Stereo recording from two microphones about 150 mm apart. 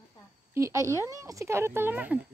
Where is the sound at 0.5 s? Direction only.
20° right (ahead or behind).